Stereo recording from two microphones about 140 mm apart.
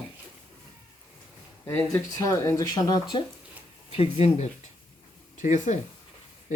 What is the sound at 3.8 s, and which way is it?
Speech, 45° left (ahead or behind).